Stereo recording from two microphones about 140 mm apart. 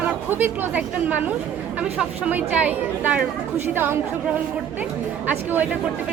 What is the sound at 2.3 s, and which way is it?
A woman's voice, 10° right (ahead or behind).